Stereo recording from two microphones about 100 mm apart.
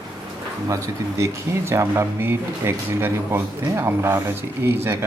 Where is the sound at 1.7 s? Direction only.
30° right (ahead or behind).